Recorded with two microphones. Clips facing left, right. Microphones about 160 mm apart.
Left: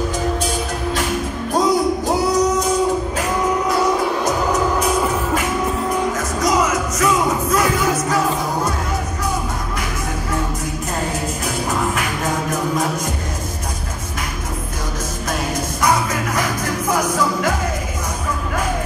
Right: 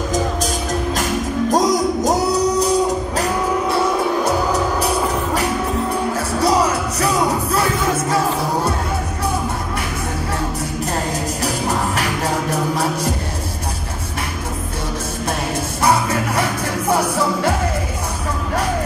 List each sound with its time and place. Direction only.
1.5 s music: 40° right (ahead or behind)
11.4 s music: 35° right (ahead or behind)
15.8 s music: 30° right (ahead or behind)